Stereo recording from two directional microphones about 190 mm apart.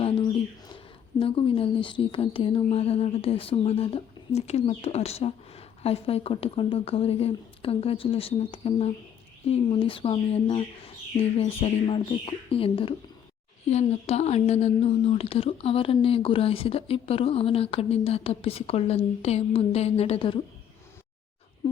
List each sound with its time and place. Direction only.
1.2 s speech: 30° left (ahead or behind)